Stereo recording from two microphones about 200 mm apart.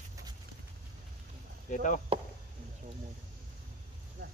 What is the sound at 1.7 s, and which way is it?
Speech, 40° left (ahead or behind).